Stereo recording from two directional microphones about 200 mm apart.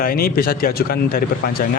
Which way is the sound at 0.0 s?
50° left (ahead or behind).